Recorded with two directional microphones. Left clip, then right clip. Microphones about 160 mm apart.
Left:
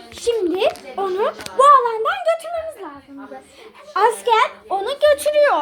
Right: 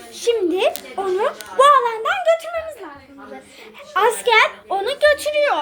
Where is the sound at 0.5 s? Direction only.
20° left (ahead or behind).